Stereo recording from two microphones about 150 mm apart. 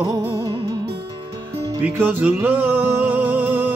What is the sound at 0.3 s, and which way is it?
Music, 20° right (ahead or behind).